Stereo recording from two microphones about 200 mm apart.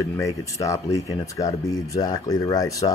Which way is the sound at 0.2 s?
15° left (ahead or behind).